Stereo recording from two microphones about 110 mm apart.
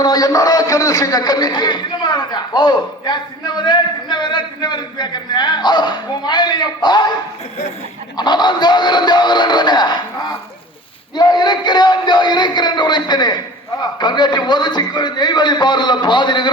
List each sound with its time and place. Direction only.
0.0 s a man's voice: 35° left (ahead or behind)
8.1 s a man's voice: 40° left (ahead or behind)
11.1 s a man's voice: 40° left (ahead or behind)